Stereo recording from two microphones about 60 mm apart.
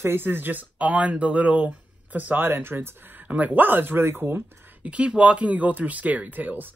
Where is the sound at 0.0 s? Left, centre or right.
Right.